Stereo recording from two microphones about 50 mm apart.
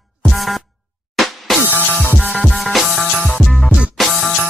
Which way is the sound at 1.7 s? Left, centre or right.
Right.